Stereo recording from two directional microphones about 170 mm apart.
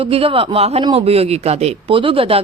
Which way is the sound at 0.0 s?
35° right (ahead or behind).